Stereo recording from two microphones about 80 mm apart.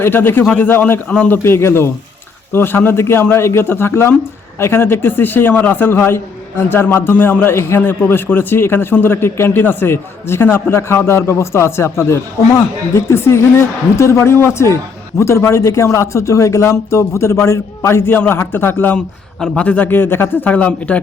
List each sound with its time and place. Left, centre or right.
0.0 s a man's voice: left
1.5 s a man's voice: left
18.9 s a man's voice: centre